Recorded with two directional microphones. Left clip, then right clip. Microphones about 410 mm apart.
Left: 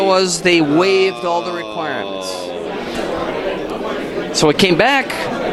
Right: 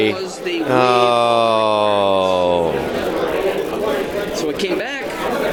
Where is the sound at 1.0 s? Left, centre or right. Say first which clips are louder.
Right 4 dB; right.